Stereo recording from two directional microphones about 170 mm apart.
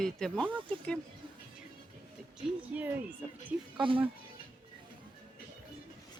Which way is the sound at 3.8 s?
30° right (ahead or behind).